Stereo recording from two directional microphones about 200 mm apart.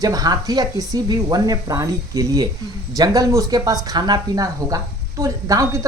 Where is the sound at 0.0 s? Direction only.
20° right (ahead or behind).